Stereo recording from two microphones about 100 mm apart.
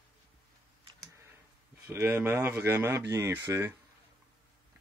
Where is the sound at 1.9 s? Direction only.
20° right (ahead or behind).